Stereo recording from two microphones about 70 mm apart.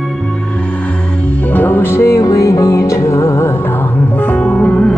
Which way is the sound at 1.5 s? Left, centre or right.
Left.